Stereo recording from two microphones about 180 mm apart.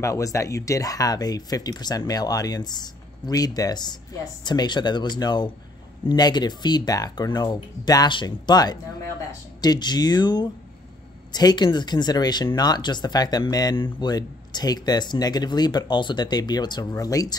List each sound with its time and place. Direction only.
0.0 s speech: 15° left (ahead or behind)